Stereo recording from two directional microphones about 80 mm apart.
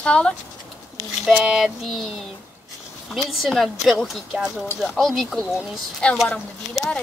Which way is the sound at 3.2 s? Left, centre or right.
Centre.